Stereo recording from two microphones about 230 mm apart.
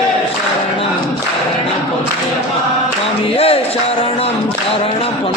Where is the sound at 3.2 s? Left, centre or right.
Left.